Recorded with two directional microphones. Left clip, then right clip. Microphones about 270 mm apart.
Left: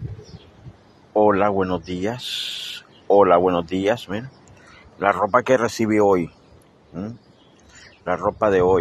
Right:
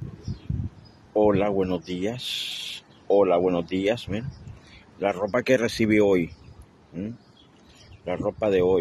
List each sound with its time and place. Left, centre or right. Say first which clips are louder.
1.1 s speech: left 4 dB; centre
8.0 s speech: left 6 dB; centre